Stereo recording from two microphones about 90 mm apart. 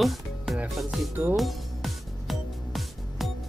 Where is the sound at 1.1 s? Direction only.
25° right (ahead or behind).